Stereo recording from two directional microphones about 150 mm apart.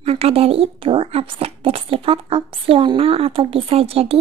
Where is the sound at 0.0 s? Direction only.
40° right (ahead or behind).